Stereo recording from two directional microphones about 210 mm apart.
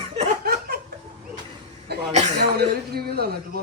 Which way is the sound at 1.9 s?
50° right (ahead or behind).